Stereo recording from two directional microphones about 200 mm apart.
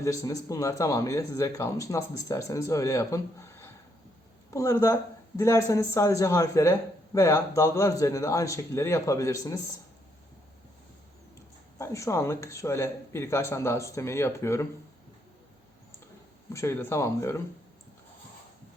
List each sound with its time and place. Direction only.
0.0 s speech: 15° left (ahead or behind)
11.8 s speech: 15° left (ahead or behind)
16.5 s speech: 15° left (ahead or behind)